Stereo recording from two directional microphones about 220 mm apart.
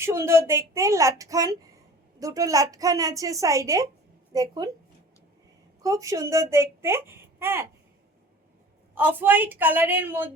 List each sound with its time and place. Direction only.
0.0 s a child's voice: 10° right (ahead or behind)
5.8 s a child's voice: 15° right (ahead or behind)
9.0 s a child's voice: 10° right (ahead or behind)